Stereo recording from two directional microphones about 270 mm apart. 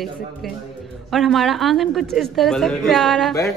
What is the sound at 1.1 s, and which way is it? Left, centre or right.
Speech, centre.